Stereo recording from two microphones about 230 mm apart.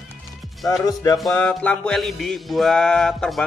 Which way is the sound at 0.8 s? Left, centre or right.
Centre.